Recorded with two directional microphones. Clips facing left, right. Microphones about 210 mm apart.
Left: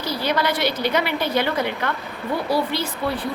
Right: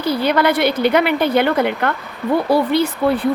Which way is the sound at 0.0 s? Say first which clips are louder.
Right 7 dB; 55° right (ahead or behind).